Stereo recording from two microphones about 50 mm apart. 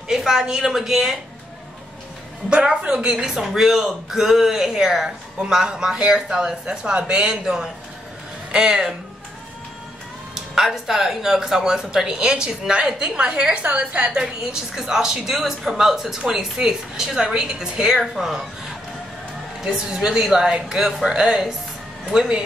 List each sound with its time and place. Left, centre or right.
0.1 s speech: centre
2.5 s speech: centre
10.3 s speech: centre
13.6 s a woman's voice: right
14.2 s speech: centre
19.6 s speech: centre